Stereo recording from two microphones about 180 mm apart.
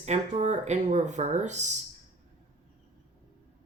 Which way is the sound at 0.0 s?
40° right (ahead or behind).